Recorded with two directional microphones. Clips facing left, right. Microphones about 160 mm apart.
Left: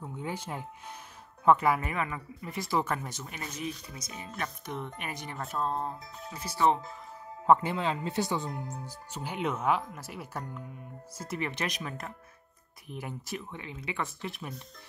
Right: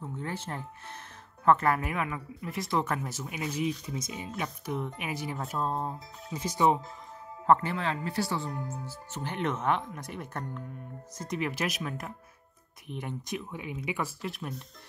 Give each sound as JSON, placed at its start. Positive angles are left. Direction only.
{"t": 0.0, "sound": "speech", "side_deg": 15}
{"t": 1.8, "sound": "speech", "side_deg": -5}
{"t": 6.3, "sound": "speech", "side_deg": -15}
{"t": 7.4, "sound": "speech", "side_deg": 15}
{"t": 13.5, "sound": "speech", "side_deg": -10}